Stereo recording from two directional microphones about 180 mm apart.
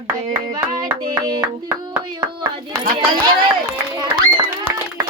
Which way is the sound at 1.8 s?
25° right (ahead or behind).